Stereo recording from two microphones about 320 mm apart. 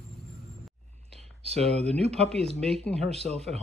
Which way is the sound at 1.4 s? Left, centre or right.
Centre.